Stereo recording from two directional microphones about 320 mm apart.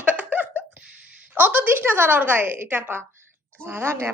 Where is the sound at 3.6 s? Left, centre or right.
Centre.